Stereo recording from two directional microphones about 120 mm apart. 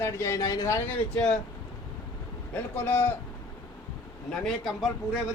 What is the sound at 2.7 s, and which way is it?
Speech, 15° left (ahead or behind).